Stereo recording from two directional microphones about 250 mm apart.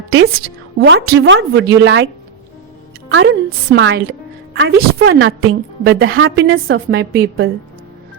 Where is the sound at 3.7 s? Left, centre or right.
Right.